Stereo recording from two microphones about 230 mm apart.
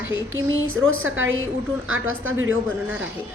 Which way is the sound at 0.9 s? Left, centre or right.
Right.